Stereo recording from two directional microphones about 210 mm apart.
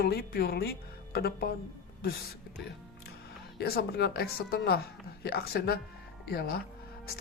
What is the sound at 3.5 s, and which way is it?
A man's voice, 50° left (ahead or behind).